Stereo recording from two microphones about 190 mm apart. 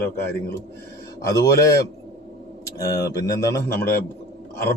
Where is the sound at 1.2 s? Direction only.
15° left (ahead or behind).